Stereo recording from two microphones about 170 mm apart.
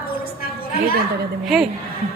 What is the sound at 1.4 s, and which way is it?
Speech, centre (ahead or behind).